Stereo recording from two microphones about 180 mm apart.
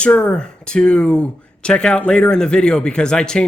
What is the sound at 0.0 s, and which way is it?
Speech, 5° left (ahead or behind).